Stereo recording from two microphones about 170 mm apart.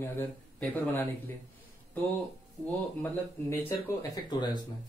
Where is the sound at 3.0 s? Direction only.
15° left (ahead or behind).